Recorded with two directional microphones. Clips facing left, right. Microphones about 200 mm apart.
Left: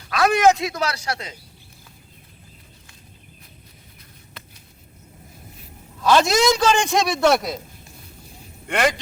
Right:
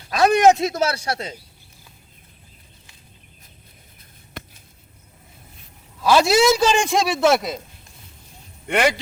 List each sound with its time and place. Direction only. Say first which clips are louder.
0.1 s speech: right 2 dB; 25° right (ahead or behind)
0.5 s a man's voice: right 4 dB; 40° right (ahead or behind)
0.8 s speech: right 3 dB; 25° right (ahead or behind)
6.0 s a man's voice: right 1 dB; 10° right (ahead or behind)
8.6 s speech: right 2 dB; 5° right (ahead or behind)